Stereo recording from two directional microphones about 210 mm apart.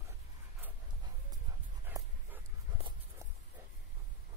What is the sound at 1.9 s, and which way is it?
Dog, 10° right (ahead or behind).